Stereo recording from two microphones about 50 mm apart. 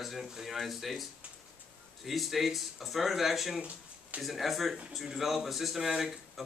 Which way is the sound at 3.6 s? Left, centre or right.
Right.